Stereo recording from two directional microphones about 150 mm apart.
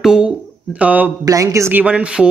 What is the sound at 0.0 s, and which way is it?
Speech, 5° right (ahead or behind).